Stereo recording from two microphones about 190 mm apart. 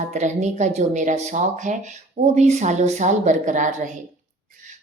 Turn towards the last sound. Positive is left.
turn(degrees=-40)  # may be behind; listen again after turning